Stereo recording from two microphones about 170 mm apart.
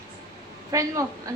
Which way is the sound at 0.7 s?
20° right (ahead or behind).